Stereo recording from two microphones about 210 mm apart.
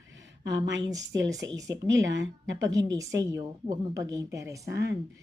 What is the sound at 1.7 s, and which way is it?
Speech, 60° right (ahead or behind).